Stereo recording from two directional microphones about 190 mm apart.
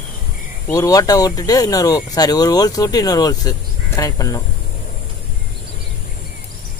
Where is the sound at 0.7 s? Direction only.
20° left (ahead or behind).